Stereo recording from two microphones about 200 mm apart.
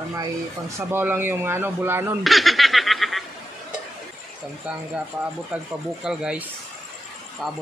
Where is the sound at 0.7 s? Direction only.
10° right (ahead or behind).